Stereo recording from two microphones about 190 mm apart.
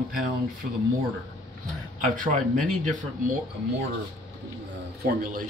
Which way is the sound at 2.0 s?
45° right (ahead or behind).